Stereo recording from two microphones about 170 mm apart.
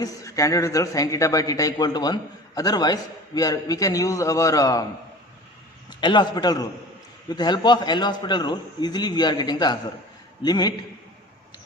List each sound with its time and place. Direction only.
0.0 s a man's voice: 20° left (ahead or behind)
6.0 s a man's voice: 25° left (ahead or behind)